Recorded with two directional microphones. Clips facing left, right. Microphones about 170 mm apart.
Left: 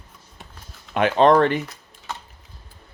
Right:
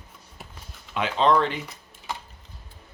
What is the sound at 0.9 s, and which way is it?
Speech, 55° left (ahead or behind).